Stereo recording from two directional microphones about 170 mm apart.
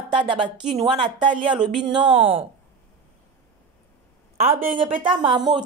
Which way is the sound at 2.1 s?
30° right (ahead or behind).